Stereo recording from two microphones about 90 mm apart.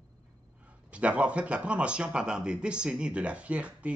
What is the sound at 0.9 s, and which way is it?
Speech, 15° right (ahead or behind).